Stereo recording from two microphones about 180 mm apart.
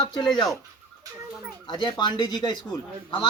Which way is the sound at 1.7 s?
25° left (ahead or behind).